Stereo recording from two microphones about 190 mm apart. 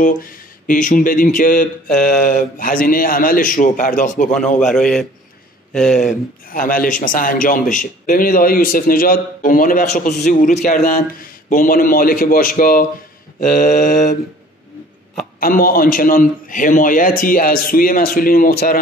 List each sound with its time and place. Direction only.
0.0 s a man's voice: 45° left (ahead or behind)
4.7 s a man's voice: 5° left (ahead or behind)
5.9 s a man's voice: 45° left (ahead or behind)
15.4 s a man's voice: 50° left (ahead or behind)